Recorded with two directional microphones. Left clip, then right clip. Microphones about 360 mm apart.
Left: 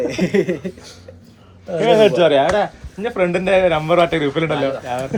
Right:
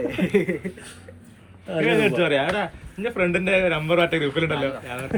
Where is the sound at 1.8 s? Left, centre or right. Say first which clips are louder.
Left 8 dB; centre.